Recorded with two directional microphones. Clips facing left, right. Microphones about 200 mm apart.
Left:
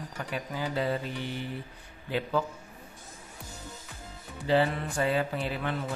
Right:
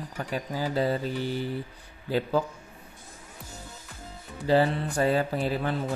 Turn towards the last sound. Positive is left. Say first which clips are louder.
# right 4 dB
turn(degrees=-40)  # may be behind; listen again after turning